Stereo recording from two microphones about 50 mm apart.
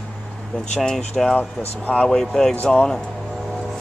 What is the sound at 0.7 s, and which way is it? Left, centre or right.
Speech, centre.